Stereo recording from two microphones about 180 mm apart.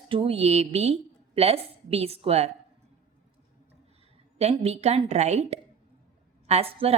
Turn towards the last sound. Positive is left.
turn(degrees=-30)  # may be behind; listen again after turning